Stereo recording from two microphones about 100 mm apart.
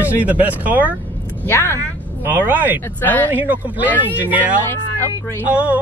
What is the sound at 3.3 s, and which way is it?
Speech, 20° right (ahead or behind).